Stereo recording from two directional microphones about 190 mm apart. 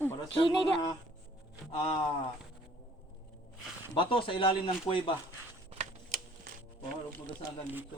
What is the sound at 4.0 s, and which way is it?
Speech, 25° left (ahead or behind).